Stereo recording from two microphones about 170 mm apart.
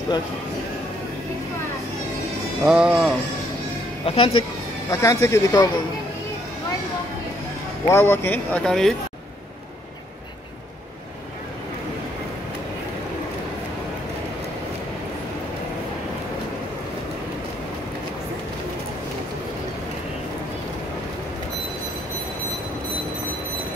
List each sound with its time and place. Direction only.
2.6 s speech: 5° right (ahead or behind)
4.0 s speech: 35° left (ahead or behind)
4.9 s speech: 20° left (ahead or behind)
7.8 s speech: 15° left (ahead or behind)